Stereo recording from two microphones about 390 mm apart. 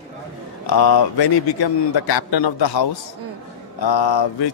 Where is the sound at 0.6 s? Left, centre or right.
Left.